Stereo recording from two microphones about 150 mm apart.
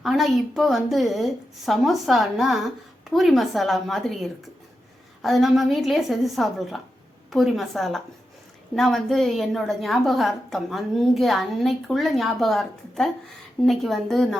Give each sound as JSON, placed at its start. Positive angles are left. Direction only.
{"t": 0.0, "sound": "a woman's voice", "side_deg": 0}